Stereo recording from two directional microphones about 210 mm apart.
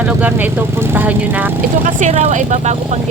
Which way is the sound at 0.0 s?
10° right (ahead or behind).